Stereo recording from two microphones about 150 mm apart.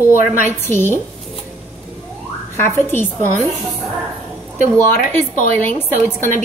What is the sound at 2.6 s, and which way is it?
Speech, 15° left (ahead or behind).